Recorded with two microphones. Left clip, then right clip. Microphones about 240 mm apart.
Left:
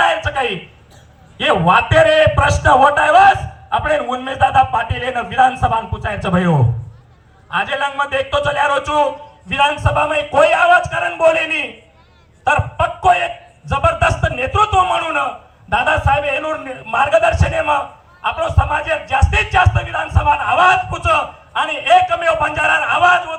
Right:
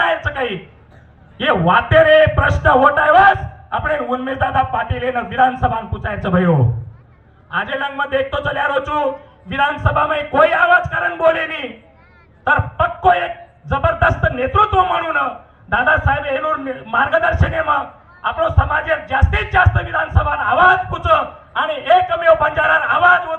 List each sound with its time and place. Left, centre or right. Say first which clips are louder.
0.3 s a sound: left 2 dB; centre
1.4 s a man's voice: left 1 dB; centre
12.5 s a man's voice: even; left